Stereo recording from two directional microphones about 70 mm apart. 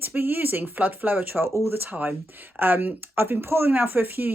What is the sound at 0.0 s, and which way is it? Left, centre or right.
Speech, right.